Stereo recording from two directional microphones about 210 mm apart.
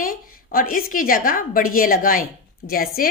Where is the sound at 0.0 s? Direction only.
45° left (ahead or behind).